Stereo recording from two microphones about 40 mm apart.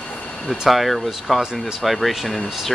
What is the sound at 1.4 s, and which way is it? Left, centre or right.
Speech, centre.